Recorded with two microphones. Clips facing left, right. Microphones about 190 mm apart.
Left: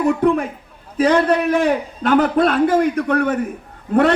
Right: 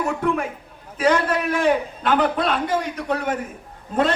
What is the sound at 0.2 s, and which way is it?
A man's voice, 35° left (ahead or behind).